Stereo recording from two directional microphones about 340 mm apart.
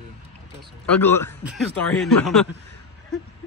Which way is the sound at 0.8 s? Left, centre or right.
Centre.